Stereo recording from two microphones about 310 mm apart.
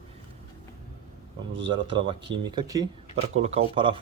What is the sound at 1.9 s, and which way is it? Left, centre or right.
Speech, centre.